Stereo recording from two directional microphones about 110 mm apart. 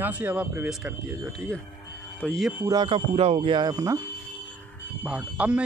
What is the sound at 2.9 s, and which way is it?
Speech, 70° right (ahead or behind).